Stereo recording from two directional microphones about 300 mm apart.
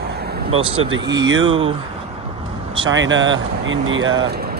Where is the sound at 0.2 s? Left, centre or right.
Right.